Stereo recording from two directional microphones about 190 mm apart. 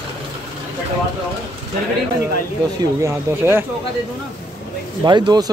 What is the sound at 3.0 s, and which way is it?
Speech, 10° right (ahead or behind).